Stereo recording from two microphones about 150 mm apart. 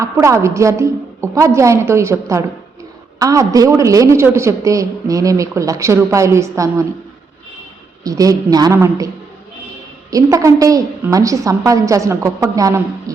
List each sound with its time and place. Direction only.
0.0 s a woman's voice: 20° right (ahead or behind)
8.0 s a woman's voice: 25° right (ahead or behind)
10.1 s a woman's voice: 20° right (ahead or behind)